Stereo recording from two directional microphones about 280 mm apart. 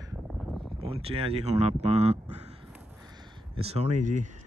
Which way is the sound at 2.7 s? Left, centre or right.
Centre.